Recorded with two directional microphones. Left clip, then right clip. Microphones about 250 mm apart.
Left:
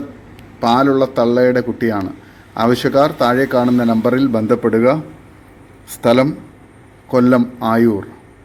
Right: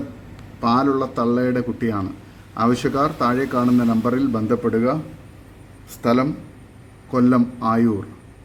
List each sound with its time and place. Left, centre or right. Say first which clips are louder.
0.6 s a man's voice: left 6 dB; centre
6.0 s a man's voice: left 7 dB; centre